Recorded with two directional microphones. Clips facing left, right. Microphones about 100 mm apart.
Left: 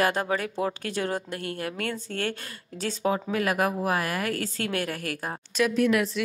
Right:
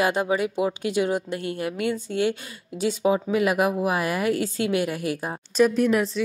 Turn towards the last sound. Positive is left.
turn(degrees=-30)  # may be behind; listen again after turning